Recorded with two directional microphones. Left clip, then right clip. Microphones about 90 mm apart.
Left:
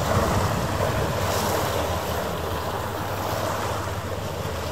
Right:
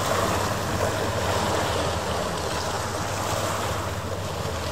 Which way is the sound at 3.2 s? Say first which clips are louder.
Even; 35° right (ahead or behind).